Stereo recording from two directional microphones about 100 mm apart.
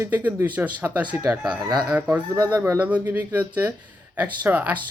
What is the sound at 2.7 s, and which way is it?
Speech, 15° right (ahead or behind).